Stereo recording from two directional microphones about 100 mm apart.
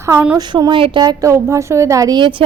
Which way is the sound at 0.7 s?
60° right (ahead or behind).